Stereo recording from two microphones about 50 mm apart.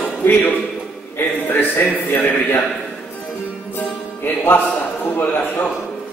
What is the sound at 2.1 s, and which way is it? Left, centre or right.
Speech, left.